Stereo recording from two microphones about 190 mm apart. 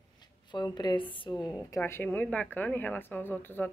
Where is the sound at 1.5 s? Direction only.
15° left (ahead or behind).